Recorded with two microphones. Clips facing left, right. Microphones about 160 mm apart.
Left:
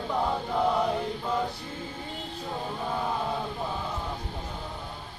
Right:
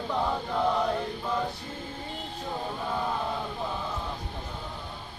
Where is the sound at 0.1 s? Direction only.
10° left (ahead or behind).